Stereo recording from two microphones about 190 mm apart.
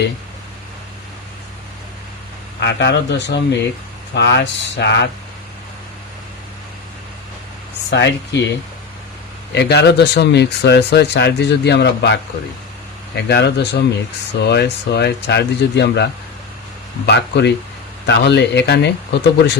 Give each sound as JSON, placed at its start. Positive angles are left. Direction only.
{"t": 2.6, "sound": "speech", "side_deg": 65}
{"t": 7.9, "sound": "speech", "side_deg": 65}
{"t": 9.6, "sound": "speech", "side_deg": 60}
{"t": 17.1, "sound": "speech", "side_deg": 65}